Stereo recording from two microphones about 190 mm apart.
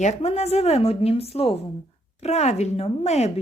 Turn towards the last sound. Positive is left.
turn(degrees=35)  # may be behind; listen again after turning